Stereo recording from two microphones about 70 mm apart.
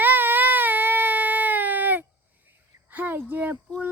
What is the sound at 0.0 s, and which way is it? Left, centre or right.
Baby cry, right.